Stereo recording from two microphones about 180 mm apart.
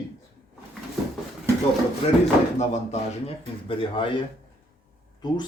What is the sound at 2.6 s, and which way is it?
Speech, 35° left (ahead or behind).